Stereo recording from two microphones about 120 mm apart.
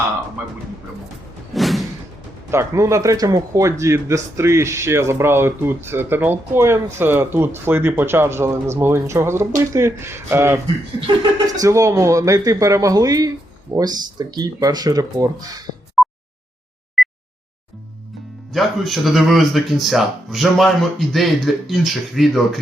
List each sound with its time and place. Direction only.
1.5 s music: centre (ahead or behind)
2.5 s speech: 25° right (ahead or behind)
11.6 s speech: 25° right (ahead or behind)
16.0 s a sound: centre (ahead or behind)
18.5 s speech: centre (ahead or behind)